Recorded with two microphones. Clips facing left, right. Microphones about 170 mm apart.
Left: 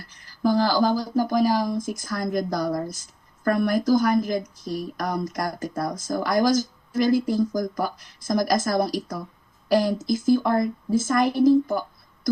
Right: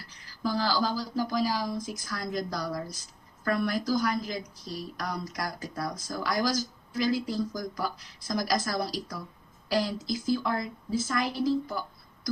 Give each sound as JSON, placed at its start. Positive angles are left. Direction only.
{"t": 0.0, "sound": "a woman's voice", "side_deg": 50}